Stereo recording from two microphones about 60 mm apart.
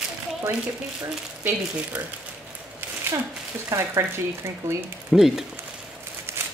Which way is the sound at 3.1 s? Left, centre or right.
Right.